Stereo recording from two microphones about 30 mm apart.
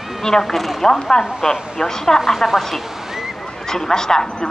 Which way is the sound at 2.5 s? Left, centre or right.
Centre.